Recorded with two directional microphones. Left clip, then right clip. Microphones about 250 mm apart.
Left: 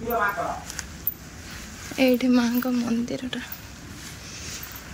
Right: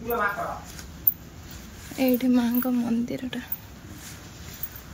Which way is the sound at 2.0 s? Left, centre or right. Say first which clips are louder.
Left 3 dB; centre.